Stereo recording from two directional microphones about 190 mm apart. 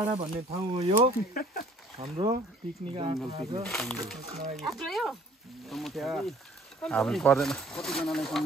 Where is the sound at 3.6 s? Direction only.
Centre (ahead or behind).